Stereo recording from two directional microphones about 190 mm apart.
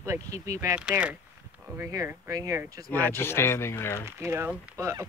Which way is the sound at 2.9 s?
10° left (ahead or behind).